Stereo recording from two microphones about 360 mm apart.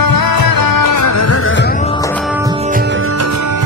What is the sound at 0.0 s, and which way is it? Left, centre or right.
Music, left.